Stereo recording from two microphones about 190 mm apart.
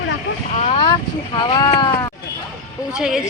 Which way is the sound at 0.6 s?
30° left (ahead or behind).